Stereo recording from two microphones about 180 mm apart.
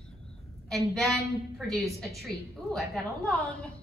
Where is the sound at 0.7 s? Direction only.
Centre (ahead or behind).